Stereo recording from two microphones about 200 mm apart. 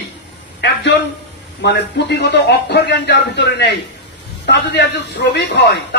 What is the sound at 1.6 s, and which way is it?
A man's voice, 60° left (ahead or behind).